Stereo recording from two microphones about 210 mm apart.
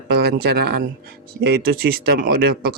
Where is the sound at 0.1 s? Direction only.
50° right (ahead or behind).